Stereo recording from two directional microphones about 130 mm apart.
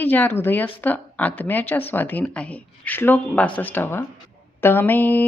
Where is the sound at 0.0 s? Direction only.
15° left (ahead or behind).